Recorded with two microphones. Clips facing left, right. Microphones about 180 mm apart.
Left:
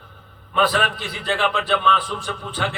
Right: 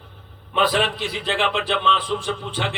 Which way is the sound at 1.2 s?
20° right (ahead or behind).